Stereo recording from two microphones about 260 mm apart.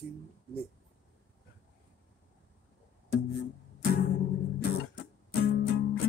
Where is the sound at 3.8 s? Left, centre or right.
Left.